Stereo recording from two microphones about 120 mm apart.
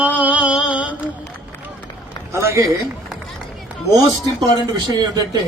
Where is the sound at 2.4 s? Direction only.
20° right (ahead or behind).